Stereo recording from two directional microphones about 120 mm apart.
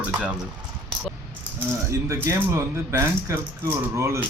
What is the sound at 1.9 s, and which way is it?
Speech, 25° right (ahead or behind).